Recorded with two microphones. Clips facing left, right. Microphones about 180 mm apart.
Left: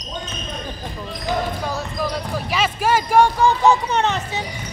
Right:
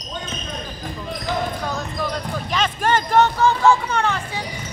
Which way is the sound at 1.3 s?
10° left (ahead or behind).